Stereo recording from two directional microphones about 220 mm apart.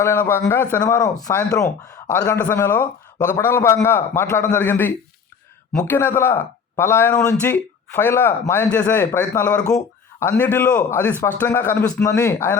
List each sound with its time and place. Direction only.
0.0 s speech: 10° left (ahead or behind)